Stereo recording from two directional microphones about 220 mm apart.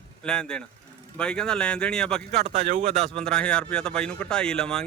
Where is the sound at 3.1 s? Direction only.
5° left (ahead or behind).